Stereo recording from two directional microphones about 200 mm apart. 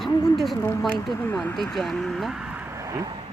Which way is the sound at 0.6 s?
15° left (ahead or behind).